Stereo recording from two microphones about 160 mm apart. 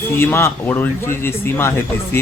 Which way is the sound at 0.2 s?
15° left (ahead or behind).